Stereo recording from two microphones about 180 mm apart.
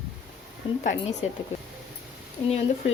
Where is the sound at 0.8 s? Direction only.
40° left (ahead or behind).